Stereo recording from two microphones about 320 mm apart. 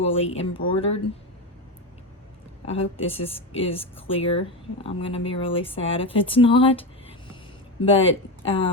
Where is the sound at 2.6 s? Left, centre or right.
Centre.